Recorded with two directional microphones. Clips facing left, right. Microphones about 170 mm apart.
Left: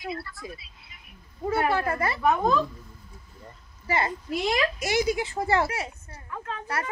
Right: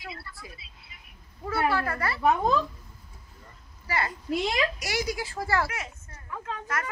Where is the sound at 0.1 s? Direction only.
25° right (ahead or behind).